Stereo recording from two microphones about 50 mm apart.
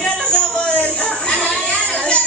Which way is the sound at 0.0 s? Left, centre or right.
Centre.